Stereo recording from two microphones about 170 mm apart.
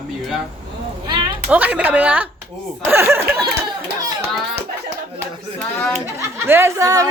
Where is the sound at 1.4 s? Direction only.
10° right (ahead or behind).